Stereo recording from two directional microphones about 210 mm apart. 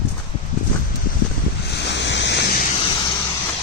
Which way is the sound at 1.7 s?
55° left (ahead or behind).